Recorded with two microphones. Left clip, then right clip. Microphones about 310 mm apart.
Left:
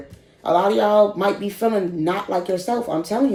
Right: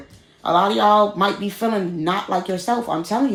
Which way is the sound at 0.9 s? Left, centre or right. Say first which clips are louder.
Even; centre.